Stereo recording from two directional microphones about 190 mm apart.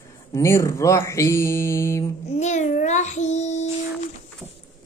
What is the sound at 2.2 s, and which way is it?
Child singing, 35° left (ahead or behind).